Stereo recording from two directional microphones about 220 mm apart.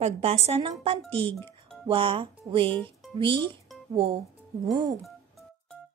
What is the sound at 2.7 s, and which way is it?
Speech, 10° left (ahead or behind).